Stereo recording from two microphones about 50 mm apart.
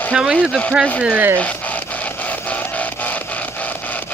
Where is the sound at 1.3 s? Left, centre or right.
Left.